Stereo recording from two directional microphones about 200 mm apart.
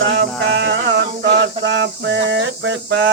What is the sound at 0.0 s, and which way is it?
Mantra, 65° right (ahead or behind).